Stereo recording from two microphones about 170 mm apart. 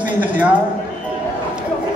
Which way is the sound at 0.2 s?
10° right (ahead or behind).